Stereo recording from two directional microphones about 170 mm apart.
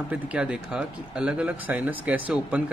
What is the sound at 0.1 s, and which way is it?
Speech, 5° right (ahead or behind).